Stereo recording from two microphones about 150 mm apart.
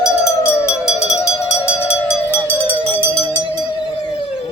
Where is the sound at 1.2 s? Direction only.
20° left (ahead or behind).